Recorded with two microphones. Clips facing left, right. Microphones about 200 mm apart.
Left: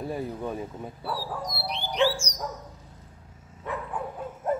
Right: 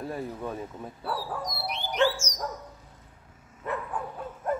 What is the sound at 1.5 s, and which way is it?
Dog, 30° left (ahead or behind).